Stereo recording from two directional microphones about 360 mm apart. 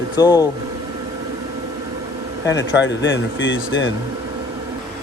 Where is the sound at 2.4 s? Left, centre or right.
Left.